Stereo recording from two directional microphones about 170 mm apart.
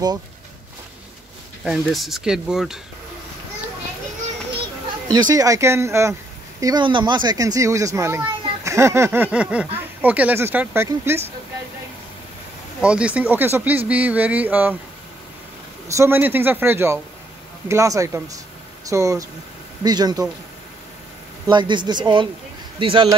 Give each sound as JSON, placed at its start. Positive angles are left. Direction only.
{"t": 1.6, "sound": "speech", "side_deg": 0}
{"t": 5.1, "sound": "speech", "side_deg": -20}
{"t": 6.6, "sound": "a child's voice", "side_deg": -25}
{"t": 12.8, "sound": "speech", "side_deg": -5}
{"t": 15.9, "sound": "a child's voice", "side_deg": -15}
{"t": 21.5, "sound": "a child's voice", "side_deg": -25}